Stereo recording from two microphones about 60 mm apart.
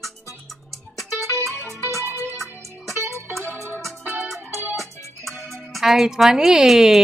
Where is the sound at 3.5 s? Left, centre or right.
Left.